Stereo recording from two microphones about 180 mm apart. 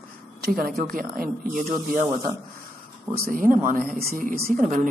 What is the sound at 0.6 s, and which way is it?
Speech, 55° right (ahead or behind).